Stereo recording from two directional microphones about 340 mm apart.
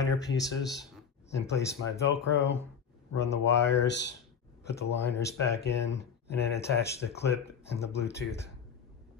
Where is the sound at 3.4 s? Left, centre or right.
Left.